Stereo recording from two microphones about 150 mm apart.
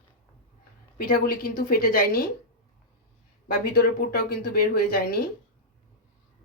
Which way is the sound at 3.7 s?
75° left (ahead or behind).